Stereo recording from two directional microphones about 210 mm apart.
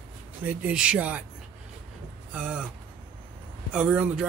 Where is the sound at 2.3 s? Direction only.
5° right (ahead or behind).